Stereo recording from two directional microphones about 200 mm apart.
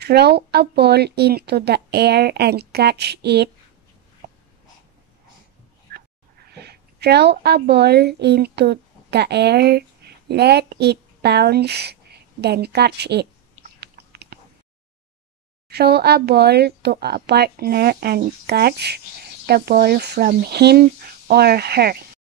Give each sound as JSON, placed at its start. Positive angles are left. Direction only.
{"t": 0.0, "sound": "speech", "side_deg": -55}
{"t": 6.5, "sound": "a woman's voice", "side_deg": -55}
{"t": 13.7, "sound": "typing", "side_deg": -55}
{"t": 15.7, "sound": "speech", "side_deg": -55}